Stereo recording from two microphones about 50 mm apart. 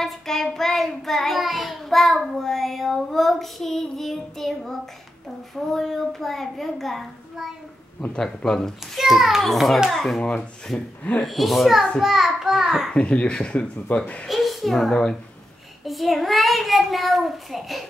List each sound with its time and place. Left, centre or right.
0.0 s child singing: centre
8.1 s speech: centre
8.9 s child singing: centre
12.0 s a child's voice: centre
12.9 s a child's voice: left
14.2 s child singing: centre